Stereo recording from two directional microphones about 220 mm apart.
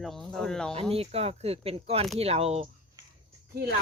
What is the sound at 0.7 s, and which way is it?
Speech, 25° right (ahead or behind).